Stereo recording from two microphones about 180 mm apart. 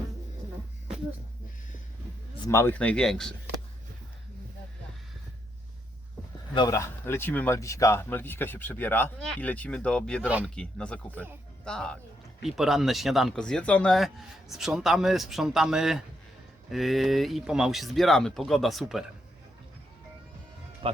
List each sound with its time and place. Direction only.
2.5 s speech: 15° left (ahead or behind)
6.5 s speech: 20° left (ahead or behind); by 19.0 s centre (ahead or behind)
20.8 s speech: 30° right (ahead or behind)